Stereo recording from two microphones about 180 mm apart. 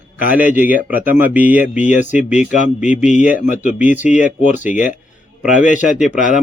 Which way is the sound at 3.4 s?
40° left (ahead or behind).